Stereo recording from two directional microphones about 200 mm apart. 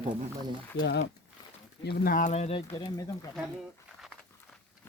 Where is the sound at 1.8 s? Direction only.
50° left (ahead or behind); by 2.8 s 30° left (ahead or behind).